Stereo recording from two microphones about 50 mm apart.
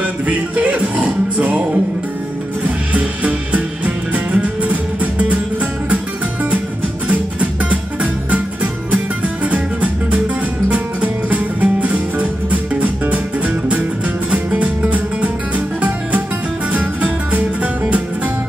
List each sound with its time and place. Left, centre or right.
0.0 s music: right
2.6 s music: right
7.1 s music: right
14.3 s music: right